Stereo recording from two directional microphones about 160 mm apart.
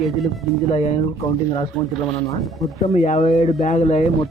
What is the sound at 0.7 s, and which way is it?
Speech, 40° left (ahead or behind).